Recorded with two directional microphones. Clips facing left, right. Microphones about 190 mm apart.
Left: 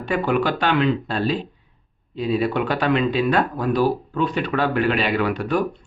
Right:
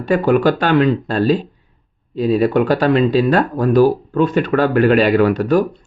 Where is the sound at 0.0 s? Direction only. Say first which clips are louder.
Right 7 dB; 40° right (ahead or behind).